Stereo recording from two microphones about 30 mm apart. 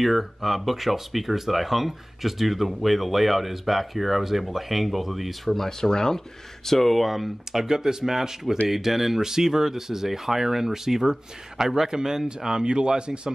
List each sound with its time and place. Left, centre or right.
0.0 s speech: centre
5.7 s speech: centre
7.6 s speech: centre; by 13.3 s right